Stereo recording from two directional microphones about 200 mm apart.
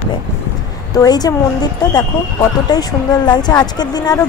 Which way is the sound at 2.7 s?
20° left (ahead or behind).